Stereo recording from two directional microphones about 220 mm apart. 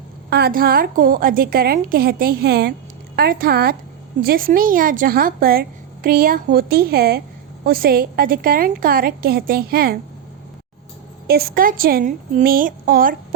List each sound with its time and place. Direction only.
0.3 s a woman's voice: 45° right (ahead or behind)
11.3 s a woman's voice: 45° right (ahead or behind)